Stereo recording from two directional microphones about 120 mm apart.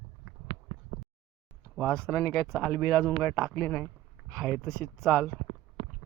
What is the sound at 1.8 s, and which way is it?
Speech, 5° left (ahead or behind).